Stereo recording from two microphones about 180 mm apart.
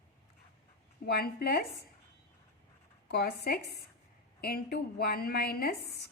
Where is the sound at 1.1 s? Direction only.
60° left (ahead or behind).